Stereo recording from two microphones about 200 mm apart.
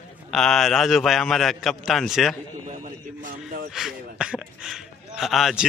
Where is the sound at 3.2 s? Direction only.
40° right (ahead or behind).